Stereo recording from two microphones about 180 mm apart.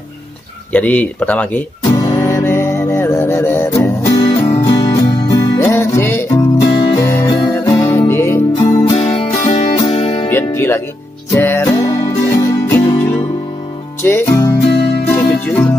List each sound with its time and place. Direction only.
0.7 s speech: 10° left (ahead or behind)
2.0 s music: 15° left (ahead or behind)
8.6 s music: 25° left (ahead or behind)
10.3 s music: 10° left (ahead or behind)